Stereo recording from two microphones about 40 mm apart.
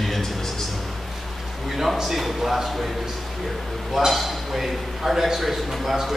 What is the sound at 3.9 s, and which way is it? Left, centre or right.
A man's voice, centre.